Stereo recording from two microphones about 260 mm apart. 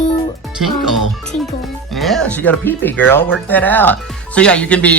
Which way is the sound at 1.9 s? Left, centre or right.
Centre.